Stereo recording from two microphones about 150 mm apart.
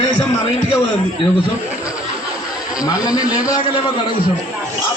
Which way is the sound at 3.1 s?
5° right (ahead or behind).